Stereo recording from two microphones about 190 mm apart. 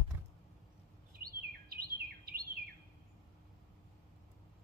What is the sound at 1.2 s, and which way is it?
Chirp, 50° right (ahead or behind).